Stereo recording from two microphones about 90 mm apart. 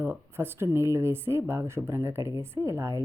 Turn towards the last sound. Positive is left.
turn(degrees=-30)  # may be behind; listen again after turning